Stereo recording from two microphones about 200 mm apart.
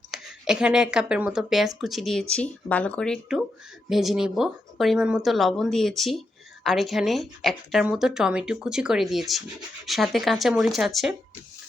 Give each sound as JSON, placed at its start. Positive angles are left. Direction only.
{"t": 0.1, "sound": "a woman's voice", "side_deg": -5}